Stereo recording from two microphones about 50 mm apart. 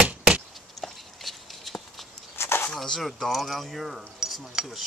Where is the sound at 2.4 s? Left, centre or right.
Left.